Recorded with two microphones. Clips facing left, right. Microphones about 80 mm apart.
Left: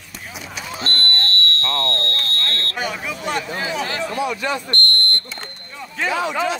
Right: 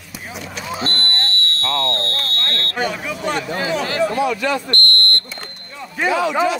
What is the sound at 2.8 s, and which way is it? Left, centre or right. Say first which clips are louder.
Speech: right 5 dB; centre.